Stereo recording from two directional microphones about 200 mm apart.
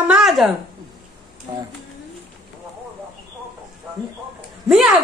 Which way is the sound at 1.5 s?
15° right (ahead or behind).